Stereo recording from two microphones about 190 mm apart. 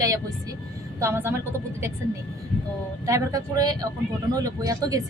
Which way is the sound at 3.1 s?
15° right (ahead or behind).